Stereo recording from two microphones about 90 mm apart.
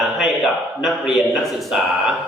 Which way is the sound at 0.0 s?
Centre (ahead or behind).